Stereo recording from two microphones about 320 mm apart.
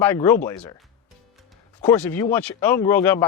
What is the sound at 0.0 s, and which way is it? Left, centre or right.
Speech, centre.